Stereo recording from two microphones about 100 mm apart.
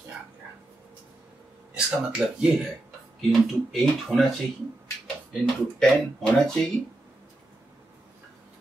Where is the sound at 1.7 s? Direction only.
10° right (ahead or behind).